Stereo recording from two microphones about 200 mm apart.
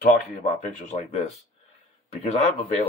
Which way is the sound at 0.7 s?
35° left (ahead or behind).